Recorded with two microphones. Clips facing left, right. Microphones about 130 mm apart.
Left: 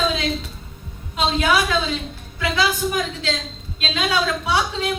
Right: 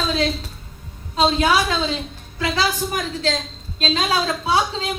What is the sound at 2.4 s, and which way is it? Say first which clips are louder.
A woman's voice: left 1 dB; 40° right (ahead or behind).